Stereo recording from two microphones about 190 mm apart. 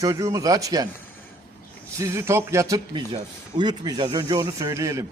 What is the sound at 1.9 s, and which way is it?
A man's voice, 15° right (ahead or behind).